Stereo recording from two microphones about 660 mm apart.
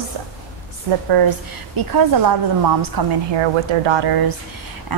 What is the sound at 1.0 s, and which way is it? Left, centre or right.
A woman's voice, right.